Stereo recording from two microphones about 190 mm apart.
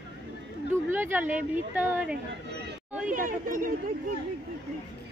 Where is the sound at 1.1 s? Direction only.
10° right (ahead or behind).